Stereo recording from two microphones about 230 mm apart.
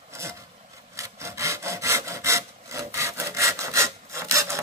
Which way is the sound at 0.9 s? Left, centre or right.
Centre.